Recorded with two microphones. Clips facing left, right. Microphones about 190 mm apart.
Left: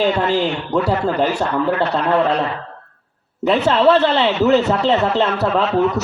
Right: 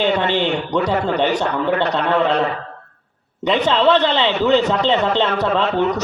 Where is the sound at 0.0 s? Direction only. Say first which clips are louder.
Left 1 dB; 5° left (ahead or behind).